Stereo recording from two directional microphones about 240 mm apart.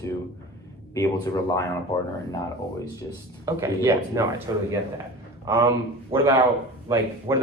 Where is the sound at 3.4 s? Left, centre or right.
Centre.